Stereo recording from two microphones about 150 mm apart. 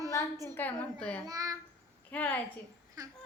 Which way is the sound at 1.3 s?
20° right (ahead or behind).